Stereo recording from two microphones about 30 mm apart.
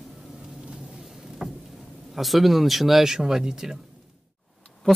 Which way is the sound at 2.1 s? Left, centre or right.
Centre.